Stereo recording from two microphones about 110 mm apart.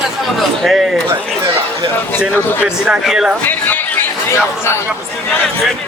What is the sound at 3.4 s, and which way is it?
Speech, 15° left (ahead or behind).